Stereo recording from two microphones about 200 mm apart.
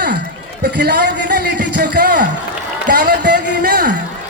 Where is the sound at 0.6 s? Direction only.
50° right (ahead or behind).